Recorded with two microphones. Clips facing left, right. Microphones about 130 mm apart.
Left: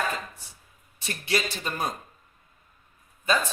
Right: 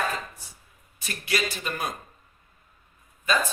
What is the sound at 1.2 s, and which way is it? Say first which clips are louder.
Speech: even; 30° left (ahead or behind).